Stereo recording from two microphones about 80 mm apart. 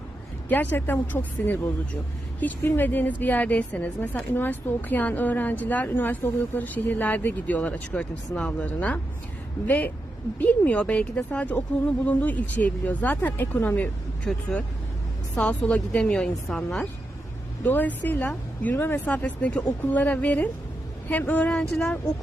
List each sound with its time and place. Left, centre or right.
0.4 s a woman's voice: left
14.3 s a woman's voice: centre
17.6 s a woman's voice: left